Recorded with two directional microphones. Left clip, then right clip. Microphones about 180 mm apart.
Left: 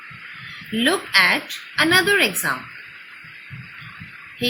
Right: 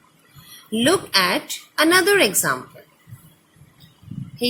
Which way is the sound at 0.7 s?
55° right (ahead or behind).